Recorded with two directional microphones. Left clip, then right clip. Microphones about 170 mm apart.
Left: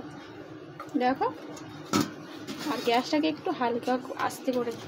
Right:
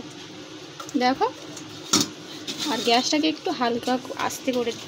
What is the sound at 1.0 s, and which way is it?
Speech, 50° right (ahead or behind).